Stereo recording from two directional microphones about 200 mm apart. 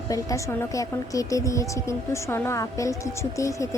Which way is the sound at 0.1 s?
15° left (ahead or behind).